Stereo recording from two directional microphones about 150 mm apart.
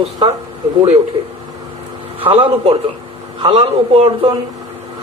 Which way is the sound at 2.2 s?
40° right (ahead or behind).